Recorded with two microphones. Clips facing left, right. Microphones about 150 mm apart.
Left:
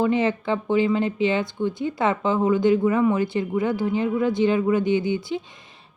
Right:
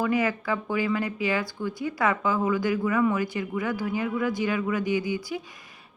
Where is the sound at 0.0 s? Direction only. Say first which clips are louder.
Left 4 dB; 25° left (ahead or behind).